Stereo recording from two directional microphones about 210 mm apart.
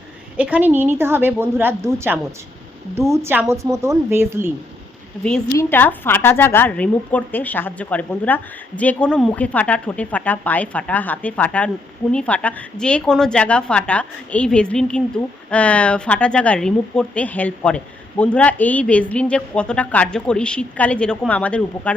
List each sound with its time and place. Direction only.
0.3 s a woman's voice: 5° right (ahead or behind)
5.5 s a woman's voice: 10° left (ahead or behind)